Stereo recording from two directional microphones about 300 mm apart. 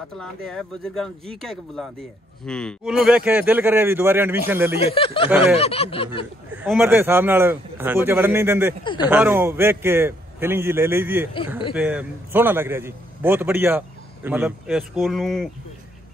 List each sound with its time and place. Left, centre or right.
0.2 s a man's voice: centre
4.9 s speech: centre
5.6 s a sound: centre
6.5 s a man's voice: centre